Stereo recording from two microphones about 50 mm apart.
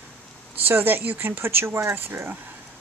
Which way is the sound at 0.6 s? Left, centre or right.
Right.